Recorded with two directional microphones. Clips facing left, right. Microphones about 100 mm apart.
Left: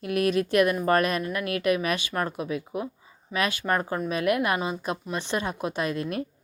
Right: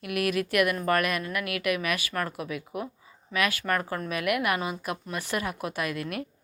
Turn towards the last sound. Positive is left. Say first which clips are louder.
# left 3 dB
turn(degrees=30)  # may be behind; listen again after turning